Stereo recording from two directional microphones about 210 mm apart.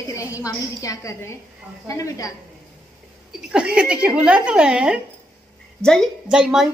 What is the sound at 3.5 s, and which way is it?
A woman's voice, 5° right (ahead or behind).